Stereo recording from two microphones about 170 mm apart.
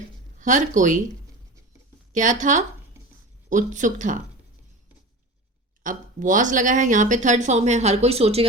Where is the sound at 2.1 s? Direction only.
50° right (ahead or behind).